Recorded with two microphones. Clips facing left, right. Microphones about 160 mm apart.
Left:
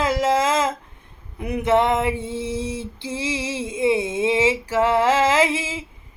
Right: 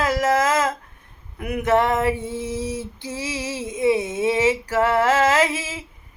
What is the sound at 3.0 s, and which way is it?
Female singing, 25° left (ahead or behind).